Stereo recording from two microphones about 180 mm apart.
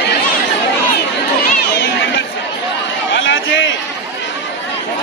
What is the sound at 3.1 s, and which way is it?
Chatter, 90° left.